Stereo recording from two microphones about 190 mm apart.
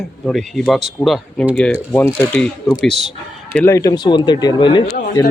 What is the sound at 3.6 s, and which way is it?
Speech, 15° left (ahead or behind).